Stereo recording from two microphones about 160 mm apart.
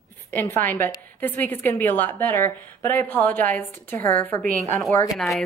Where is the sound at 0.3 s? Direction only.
10° left (ahead or behind).